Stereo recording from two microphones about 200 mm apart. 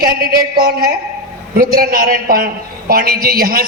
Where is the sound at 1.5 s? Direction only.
45° right (ahead or behind).